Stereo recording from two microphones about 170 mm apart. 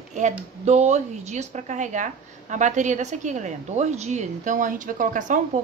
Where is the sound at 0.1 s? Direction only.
45° right (ahead or behind).